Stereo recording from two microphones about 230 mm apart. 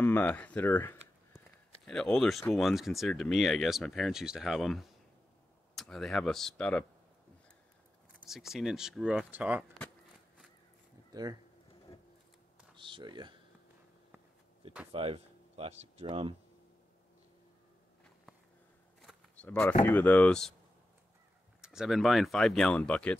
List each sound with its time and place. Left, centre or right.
0.0 s a sound: centre
1.9 s speech: centre
8.3 s speech: centre
11.1 s speech: centre
12.7 s speech: right
14.9 s speech: right
18.9 s a sound: centre
19.8 s speech: centre
21.5 s speech: centre